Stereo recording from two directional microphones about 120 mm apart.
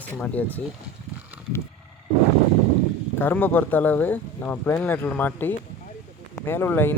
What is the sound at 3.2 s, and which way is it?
Speech, 15° left (ahead or behind).